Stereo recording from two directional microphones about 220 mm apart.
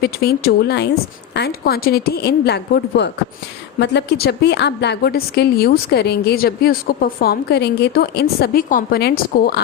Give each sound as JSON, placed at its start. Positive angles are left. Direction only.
{"t": 0.0, "sound": "a woman's voice", "side_deg": 45}